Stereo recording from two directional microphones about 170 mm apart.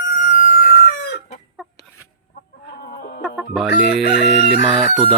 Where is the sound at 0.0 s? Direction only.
90° left.